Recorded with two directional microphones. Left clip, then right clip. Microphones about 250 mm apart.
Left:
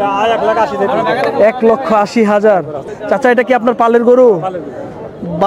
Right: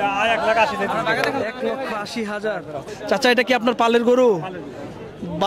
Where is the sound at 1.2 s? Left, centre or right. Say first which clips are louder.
Left 12 dB; left.